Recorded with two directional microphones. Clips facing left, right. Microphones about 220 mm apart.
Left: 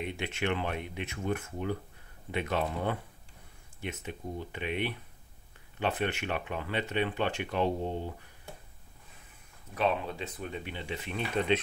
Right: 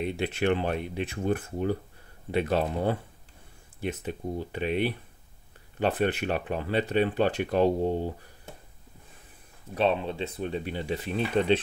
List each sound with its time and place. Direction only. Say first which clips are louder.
0.0 s speech: right 6 dB; 35° right (ahead or behind)
9.8 s speech: right 4 dB; 30° right (ahead or behind)